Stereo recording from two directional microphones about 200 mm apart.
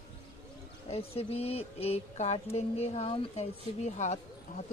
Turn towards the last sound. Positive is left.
turn(degrees=35)  # may be behind; listen again after turning